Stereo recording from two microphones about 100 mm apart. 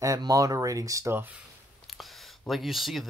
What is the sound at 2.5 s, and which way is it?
Speech, centre (ahead or behind).